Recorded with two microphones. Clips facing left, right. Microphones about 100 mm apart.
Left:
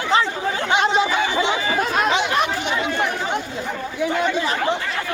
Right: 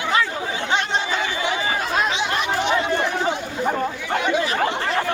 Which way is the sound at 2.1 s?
55° left (ahead or behind).